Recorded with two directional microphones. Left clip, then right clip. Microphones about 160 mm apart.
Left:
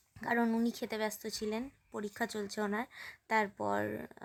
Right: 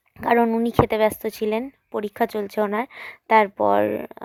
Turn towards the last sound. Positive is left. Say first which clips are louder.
# right 16 dB
turn(degrees=-40)  # may be behind; listen again after turning